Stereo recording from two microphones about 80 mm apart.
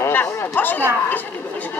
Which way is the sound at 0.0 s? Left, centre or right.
Left.